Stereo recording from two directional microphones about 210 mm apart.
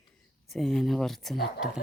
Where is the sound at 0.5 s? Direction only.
Centre (ahead or behind).